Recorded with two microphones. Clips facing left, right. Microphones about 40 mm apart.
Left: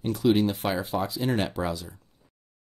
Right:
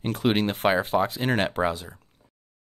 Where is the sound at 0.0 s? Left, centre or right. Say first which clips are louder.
Left 1 dB; right.